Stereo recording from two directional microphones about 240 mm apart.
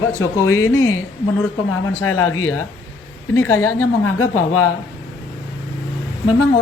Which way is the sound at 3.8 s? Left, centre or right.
Left.